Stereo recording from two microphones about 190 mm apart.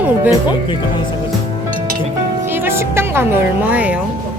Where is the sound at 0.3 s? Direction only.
25° left (ahead or behind).